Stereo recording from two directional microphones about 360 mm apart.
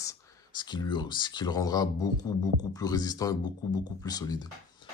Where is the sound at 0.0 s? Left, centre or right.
Centre.